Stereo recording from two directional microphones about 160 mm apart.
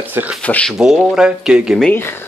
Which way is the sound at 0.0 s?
10° right (ahead or behind).